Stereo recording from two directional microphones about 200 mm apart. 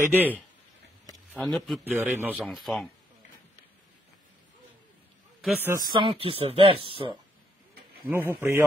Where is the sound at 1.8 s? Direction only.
10° right (ahead or behind).